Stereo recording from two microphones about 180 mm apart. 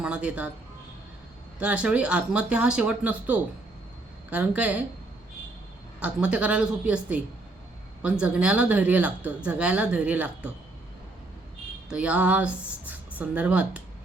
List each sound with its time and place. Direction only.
0.0 s a sound: 5° right (ahead or behind)
1.5 s speech: 5° right (ahead or behind)
6.0 s speech: 5° right (ahead or behind)
11.9 s speech: 5° right (ahead or behind)